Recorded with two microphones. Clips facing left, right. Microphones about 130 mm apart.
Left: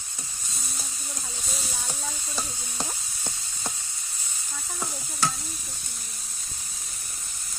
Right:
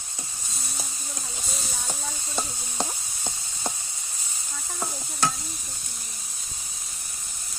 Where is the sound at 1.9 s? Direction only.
20° right (ahead or behind).